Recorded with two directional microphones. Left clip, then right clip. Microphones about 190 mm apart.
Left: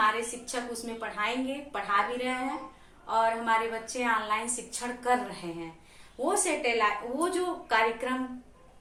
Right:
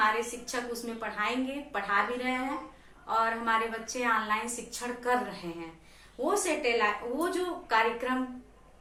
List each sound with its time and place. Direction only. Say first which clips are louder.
0.0 s a woman's voice: left 1 dB; 20° right (ahead or behind)